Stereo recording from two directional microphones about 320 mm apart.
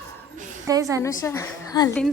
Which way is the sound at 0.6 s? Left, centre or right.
Centre.